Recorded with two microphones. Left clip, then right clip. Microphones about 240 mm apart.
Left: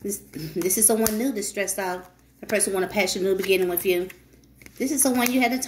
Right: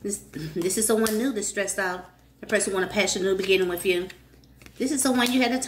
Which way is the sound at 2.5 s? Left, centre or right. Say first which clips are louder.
Even; centre.